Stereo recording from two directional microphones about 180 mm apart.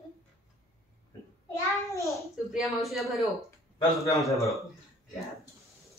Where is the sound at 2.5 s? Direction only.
Centre (ahead or behind).